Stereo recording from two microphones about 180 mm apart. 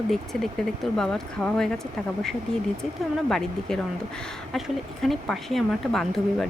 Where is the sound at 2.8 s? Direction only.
Centre (ahead or behind).